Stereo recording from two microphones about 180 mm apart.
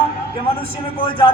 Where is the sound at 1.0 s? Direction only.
30° left (ahead or behind).